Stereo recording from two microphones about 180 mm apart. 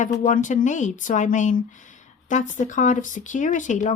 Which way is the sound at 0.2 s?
45° left (ahead or behind).